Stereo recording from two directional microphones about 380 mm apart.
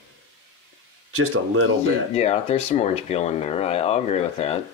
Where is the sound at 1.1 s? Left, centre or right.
Right.